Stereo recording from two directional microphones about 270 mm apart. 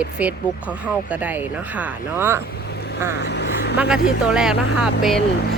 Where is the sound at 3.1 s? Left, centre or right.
Left.